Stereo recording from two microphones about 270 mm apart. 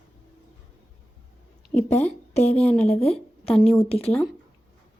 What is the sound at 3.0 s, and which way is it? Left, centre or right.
A woman's voice, left.